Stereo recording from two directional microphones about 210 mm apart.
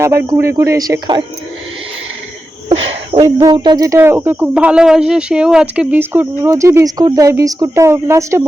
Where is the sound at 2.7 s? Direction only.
30° right (ahead or behind).